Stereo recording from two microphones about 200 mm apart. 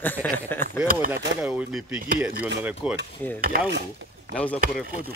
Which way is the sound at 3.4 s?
45° right (ahead or behind).